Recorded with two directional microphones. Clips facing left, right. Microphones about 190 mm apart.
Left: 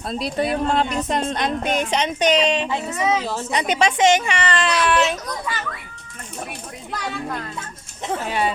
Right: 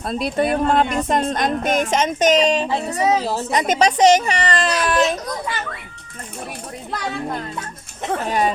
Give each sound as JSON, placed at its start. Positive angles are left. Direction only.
{"t": 0.0, "sound": "speech", "side_deg": -55}
{"t": 8.1, "sound": "speech", "side_deg": -45}